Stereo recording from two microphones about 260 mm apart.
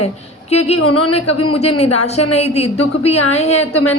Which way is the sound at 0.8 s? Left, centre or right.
Left.